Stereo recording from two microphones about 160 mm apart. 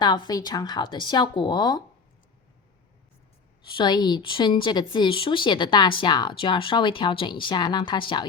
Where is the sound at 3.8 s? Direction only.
25° left (ahead or behind).